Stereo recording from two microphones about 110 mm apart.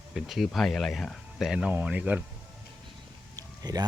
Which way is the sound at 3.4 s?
35° right (ahead or behind).